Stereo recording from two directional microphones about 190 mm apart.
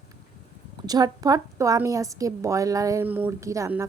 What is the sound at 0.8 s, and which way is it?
A woman's voice, 20° right (ahead or behind).